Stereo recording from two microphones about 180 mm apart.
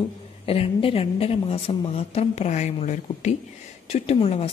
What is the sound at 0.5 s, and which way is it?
Speech, 30° left (ahead or behind).